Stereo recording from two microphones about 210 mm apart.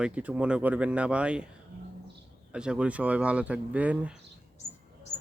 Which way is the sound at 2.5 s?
5° right (ahead or behind).